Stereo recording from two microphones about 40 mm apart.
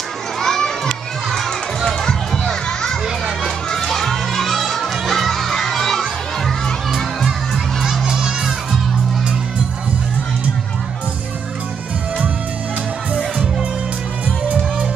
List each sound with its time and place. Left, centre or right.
0.4 s children playing: centre
1.9 s a sound: centre
3.4 s crowd: centre
8.0 s crowd: centre
13.1 s music: right